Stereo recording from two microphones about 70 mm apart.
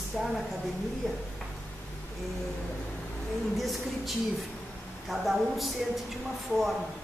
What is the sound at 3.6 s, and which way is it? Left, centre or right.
Speech, centre.